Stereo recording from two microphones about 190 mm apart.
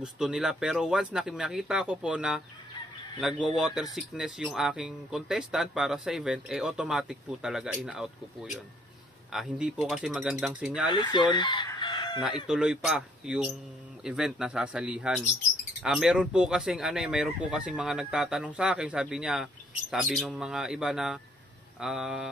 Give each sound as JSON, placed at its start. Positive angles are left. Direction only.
{"t": 0.0, "sound": "speech", "side_deg": -5}
{"t": 10.9, "sound": "chicken", "side_deg": 25}
{"t": 12.4, "sound": "speech", "side_deg": -5}